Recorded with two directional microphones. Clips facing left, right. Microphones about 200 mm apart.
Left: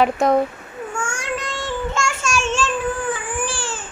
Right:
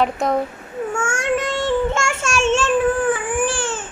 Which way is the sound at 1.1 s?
25° right (ahead or behind).